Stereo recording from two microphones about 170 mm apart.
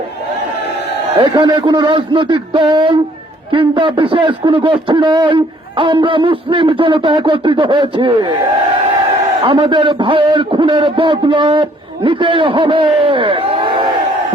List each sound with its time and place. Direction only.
1.1 s a man's voice: 30° right (ahead or behind)
9.4 s a man's voice: 30° right (ahead or behind)